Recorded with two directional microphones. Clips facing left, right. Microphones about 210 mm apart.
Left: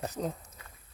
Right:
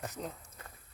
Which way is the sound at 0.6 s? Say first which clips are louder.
Right 2 dB; 50° right (ahead or behind).